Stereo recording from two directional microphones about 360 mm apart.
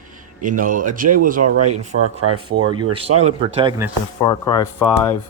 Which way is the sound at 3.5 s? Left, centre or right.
Centre.